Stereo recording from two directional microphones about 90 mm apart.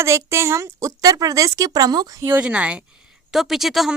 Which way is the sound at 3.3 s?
5° right (ahead or behind).